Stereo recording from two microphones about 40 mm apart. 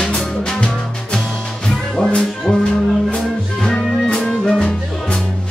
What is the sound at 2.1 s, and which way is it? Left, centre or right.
Music, centre.